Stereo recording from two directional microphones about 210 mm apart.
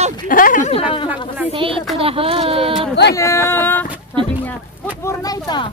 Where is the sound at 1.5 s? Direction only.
25° right (ahead or behind).